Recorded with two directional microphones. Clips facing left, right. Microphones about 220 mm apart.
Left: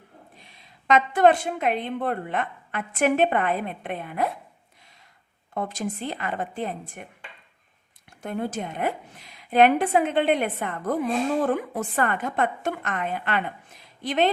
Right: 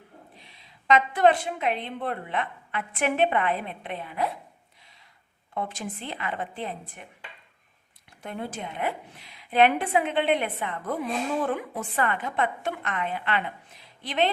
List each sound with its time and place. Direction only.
0.3 s a woman's voice: 50° left (ahead or behind)
5.5 s a woman's voice: 40° left (ahead or behind)
8.2 s a woman's voice: 45° left (ahead or behind)